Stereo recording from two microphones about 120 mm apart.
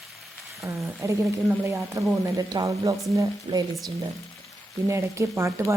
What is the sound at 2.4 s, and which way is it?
Speech, 30° right (ahead or behind).